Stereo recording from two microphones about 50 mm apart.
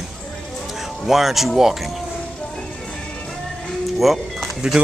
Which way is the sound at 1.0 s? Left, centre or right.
Centre.